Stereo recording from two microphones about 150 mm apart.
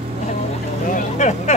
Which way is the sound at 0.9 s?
50° left (ahead or behind).